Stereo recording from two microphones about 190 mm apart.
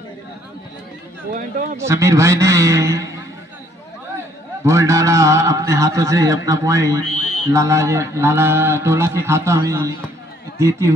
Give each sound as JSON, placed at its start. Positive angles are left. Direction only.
{"t": 1.3, "sound": "speech", "side_deg": -45}
{"t": 1.8, "sound": "a man's voice", "side_deg": -15}
{"t": 4.6, "sound": "a man's voice", "side_deg": -15}